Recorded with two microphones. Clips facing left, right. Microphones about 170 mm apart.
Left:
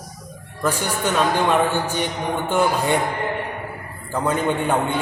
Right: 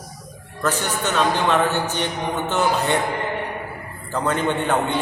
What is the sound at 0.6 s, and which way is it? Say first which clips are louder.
Speech: left 1 dB; 10° left (ahead or behind).